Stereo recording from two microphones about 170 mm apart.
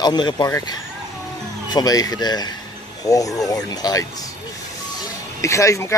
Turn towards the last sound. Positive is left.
turn(degrees=20)  # may be behind; listen again after turning